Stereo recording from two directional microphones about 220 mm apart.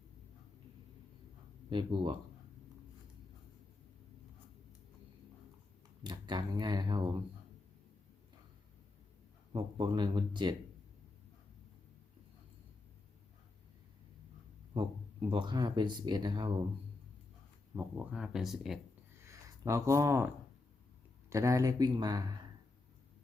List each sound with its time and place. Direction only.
1.7 s speech: 20° right (ahead or behind)
6.0 s speech: 20° right (ahead or behind)
9.5 s speech: 20° right (ahead or behind)
14.7 s speech: 20° right (ahead or behind)
17.7 s speech: 5° right (ahead or behind)
19.3 s speech: 15° right (ahead or behind)